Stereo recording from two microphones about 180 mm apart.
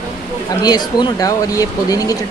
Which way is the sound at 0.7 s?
25° left (ahead or behind).